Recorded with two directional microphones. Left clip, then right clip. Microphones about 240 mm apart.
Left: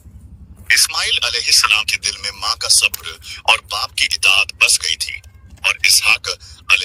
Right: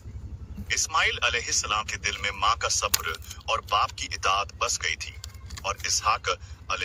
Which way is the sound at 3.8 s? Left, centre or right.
Left.